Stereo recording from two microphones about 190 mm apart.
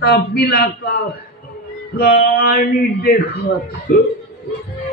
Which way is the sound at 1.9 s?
55° left (ahead or behind).